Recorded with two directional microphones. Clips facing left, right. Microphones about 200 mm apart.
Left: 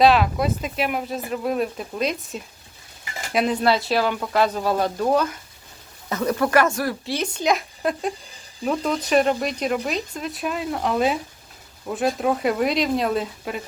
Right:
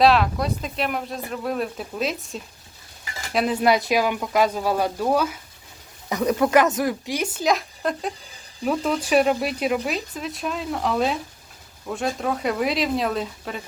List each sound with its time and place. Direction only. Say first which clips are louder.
0.0 s speech: left 1 dB; centre (ahead or behind)
3.6 s speech: right 1 dB; 15° right (ahead or behind); by 13.6 s 5° left (ahead or behind)